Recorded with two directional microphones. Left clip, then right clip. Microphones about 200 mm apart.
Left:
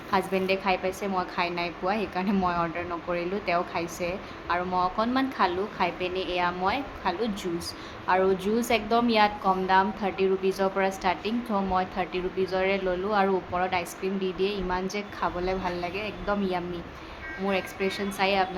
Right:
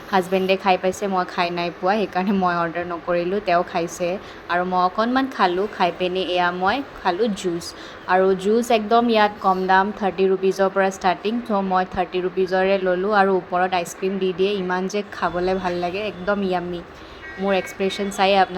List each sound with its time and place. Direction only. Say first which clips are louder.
0.1 s a woman's voice: right 6 dB; 25° right (ahead or behind)